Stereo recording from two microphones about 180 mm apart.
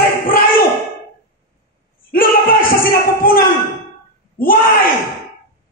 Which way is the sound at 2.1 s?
50° left (ahead or behind).